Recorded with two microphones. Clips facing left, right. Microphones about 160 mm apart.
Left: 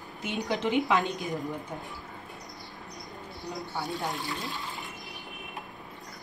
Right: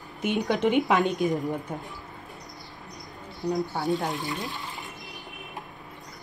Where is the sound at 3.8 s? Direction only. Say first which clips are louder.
Right 6 dB; 20° right (ahead or behind).